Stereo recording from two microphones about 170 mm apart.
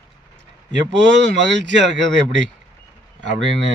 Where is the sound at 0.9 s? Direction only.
90° right.